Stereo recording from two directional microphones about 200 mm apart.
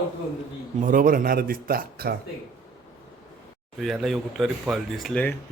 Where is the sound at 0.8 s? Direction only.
45° right (ahead or behind).